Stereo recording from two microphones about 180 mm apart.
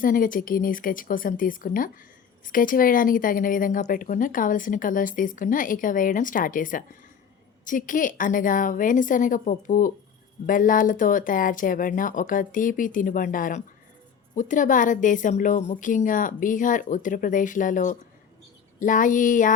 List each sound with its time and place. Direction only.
0.0 s a woman's voice: 50° left (ahead or behind)